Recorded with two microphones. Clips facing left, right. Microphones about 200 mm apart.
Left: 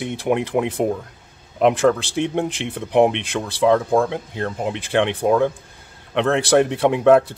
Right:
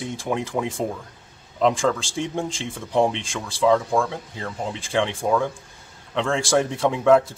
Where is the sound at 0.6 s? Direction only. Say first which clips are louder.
Left 3 dB; 15° left (ahead or behind).